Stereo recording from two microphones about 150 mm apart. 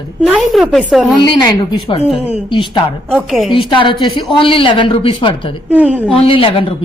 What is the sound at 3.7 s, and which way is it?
A woman's voice, 30° left (ahead or behind).